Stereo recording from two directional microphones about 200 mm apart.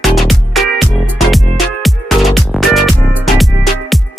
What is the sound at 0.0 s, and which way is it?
Music, centre (ahead or behind).